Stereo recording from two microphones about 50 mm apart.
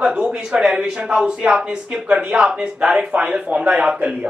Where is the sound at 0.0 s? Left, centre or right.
Centre.